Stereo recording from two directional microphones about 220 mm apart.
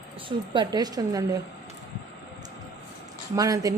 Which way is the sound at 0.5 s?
15° right (ahead or behind).